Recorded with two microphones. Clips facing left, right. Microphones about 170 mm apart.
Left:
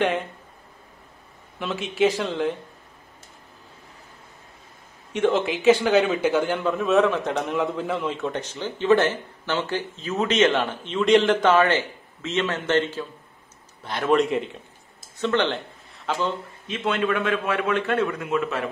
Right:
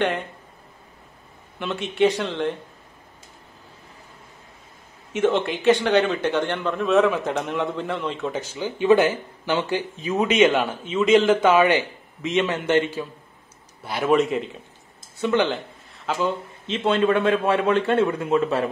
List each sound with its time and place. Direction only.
0.0 s a man's voice: centre (ahead or behind)
1.6 s a man's voice: centre (ahead or behind)
5.1 s a man's voice: centre (ahead or behind)
16.6 s a man's voice: 30° right (ahead or behind)